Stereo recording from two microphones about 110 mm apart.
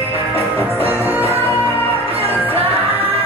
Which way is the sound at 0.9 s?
20° right (ahead or behind).